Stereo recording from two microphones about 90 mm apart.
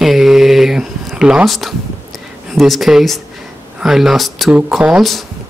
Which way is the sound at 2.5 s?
Centre (ahead or behind).